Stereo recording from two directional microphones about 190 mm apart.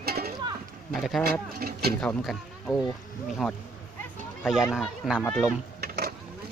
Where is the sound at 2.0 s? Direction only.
Centre (ahead or behind).